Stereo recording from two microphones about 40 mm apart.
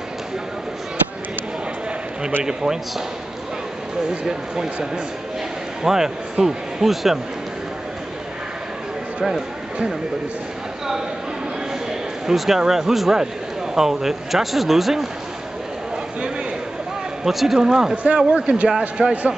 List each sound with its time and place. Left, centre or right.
2.4 s speech: centre
5.9 s speech: centre
12.3 s speech: centre
17.2 s a man's voice: centre
17.9 s speech: right